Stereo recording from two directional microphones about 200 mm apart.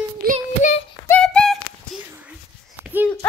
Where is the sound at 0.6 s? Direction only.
40° left (ahead or behind).